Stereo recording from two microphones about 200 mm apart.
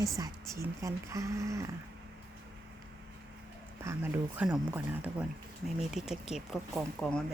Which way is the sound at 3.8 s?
10° right (ahead or behind).